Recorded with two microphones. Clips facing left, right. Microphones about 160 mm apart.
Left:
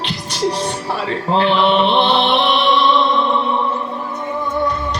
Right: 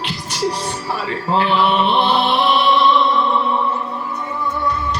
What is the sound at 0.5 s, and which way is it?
Music, 25° left (ahead or behind).